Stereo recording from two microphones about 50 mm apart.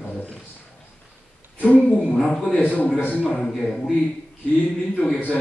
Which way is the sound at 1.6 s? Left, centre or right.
Left.